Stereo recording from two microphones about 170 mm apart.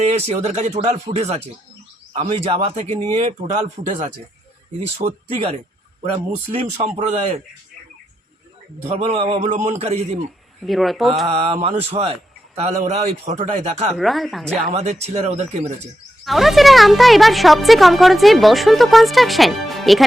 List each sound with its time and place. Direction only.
0.1 s a man's voice: 40° right (ahead or behind)
5.0 s speech: 25° right (ahead or behind)
6.5 s a man's voice: 40° right (ahead or behind)
8.9 s a man's voice: 40° right (ahead or behind)
10.6 s speech: centre (ahead or behind)
11.3 s a man's voice: 35° right (ahead or behind)
13.9 s speech: centre (ahead or behind)
14.7 s a man's voice: 40° right (ahead or behind)
16.2 s speech: centre (ahead or behind)